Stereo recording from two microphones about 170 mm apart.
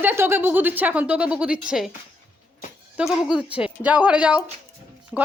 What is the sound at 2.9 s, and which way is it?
A child's voice, 5° right (ahead or behind).